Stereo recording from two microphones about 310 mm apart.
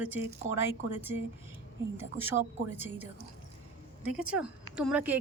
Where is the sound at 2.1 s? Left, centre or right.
Centre.